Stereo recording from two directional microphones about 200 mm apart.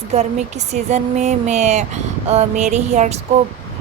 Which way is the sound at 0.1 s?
35° right (ahead or behind).